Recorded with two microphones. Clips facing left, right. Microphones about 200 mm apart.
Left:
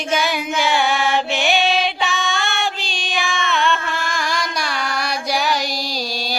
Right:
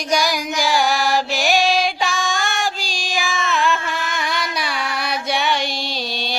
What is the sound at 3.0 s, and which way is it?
Music, centre (ahead or behind).